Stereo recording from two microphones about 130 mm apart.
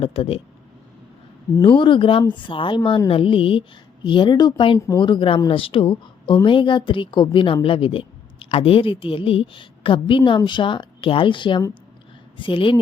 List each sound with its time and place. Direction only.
0.0 s speech: 45° left (ahead or behind)
1.6 s a woman's voice: 40° left (ahead or behind)